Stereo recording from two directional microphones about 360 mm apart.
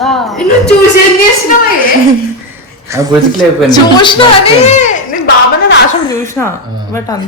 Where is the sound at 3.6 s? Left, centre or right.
Centre.